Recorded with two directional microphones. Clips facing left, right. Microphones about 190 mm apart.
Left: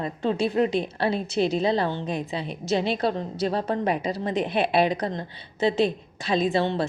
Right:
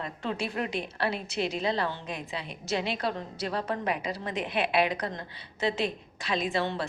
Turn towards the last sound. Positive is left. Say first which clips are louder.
# left 6 dB
turn(degrees=25)  # may be behind; listen again after turning